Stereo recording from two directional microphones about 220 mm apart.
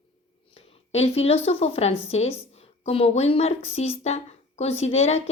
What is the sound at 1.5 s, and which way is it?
A woman's voice, 30° left (ahead or behind).